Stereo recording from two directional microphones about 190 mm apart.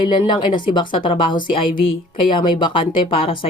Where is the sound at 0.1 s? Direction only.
25° left (ahead or behind).